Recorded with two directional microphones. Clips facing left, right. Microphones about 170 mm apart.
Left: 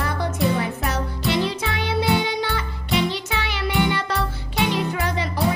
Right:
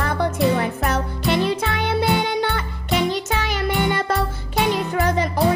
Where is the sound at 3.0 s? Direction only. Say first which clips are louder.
Right 4 dB; 45° right (ahead or behind).